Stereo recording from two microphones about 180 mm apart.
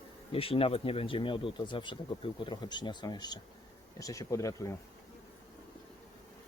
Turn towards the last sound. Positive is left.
turn(degrees=20)  # may be behind; listen again after turning